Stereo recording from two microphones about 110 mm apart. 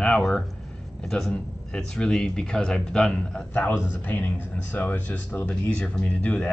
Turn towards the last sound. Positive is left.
turn(degrees=15)  # may be behind; listen again after turning